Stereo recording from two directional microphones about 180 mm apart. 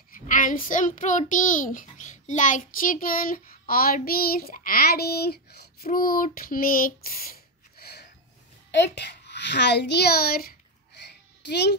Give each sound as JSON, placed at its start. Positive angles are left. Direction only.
{"t": 0.1, "sound": "a child's voice", "side_deg": 45}
{"t": 7.8, "sound": "a sound", "side_deg": 65}
{"t": 8.7, "sound": "a child's voice", "side_deg": 75}
{"t": 11.4, "sound": "a child's voice", "side_deg": 70}